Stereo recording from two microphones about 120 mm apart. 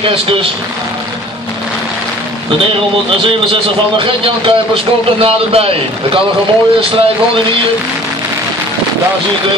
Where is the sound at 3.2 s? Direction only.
45° right (ahead or behind).